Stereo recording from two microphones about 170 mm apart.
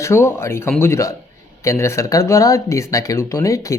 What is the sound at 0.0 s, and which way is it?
Speech, 15° left (ahead or behind).